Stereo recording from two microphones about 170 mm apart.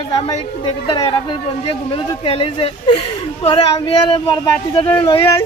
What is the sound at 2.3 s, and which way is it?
Speech, 35° left (ahead or behind).